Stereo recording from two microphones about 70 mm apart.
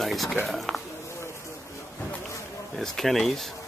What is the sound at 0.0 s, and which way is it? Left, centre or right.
Speech, centre.